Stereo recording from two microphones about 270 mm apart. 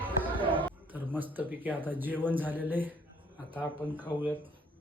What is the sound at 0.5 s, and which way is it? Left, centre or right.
A man's voice, centre.